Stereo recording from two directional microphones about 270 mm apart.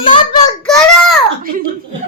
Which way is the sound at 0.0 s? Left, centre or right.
Centre.